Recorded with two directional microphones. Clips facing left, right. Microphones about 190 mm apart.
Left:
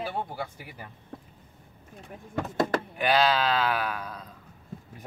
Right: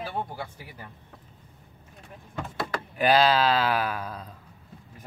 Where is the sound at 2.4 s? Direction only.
45° left (ahead or behind).